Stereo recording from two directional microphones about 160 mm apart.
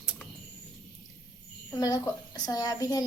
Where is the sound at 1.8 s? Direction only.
25° left (ahead or behind).